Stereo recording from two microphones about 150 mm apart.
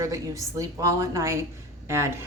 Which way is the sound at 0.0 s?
20° right (ahead or behind).